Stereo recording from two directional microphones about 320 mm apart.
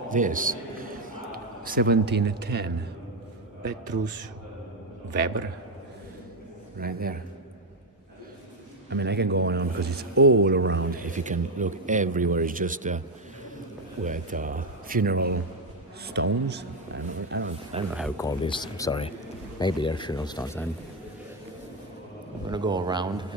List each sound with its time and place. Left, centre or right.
0.1 s a man's voice: right
6.8 s a man's voice: right
8.9 s a man's voice: right
14.0 s a man's voice: right
17.9 s speech: centre
22.5 s speech: centre